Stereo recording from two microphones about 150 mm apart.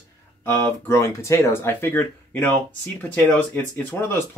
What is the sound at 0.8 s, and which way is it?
Speech, 20° left (ahead or behind).